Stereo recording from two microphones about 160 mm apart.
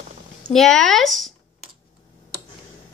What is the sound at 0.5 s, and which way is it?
Speech, 5° left (ahead or behind).